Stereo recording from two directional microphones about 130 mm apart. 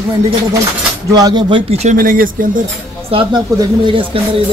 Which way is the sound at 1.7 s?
80° right.